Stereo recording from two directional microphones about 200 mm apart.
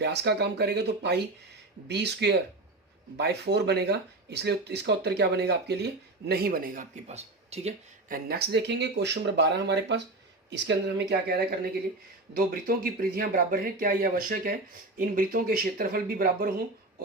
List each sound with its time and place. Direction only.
0.0 s speech: 55° right (ahead or behind); by 7.7 s 35° right (ahead or behind)
8.1 s speech: 55° right (ahead or behind)
12.6 s speech: 45° right (ahead or behind)